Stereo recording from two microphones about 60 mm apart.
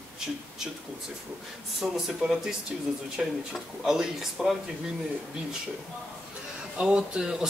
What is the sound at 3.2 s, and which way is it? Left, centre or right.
Speech, centre.